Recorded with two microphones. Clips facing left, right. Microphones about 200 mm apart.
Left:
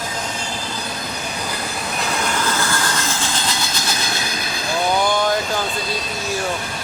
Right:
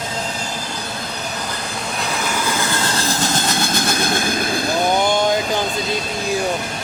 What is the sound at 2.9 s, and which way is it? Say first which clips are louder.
Train: right 4 dB; 40° right (ahead or behind).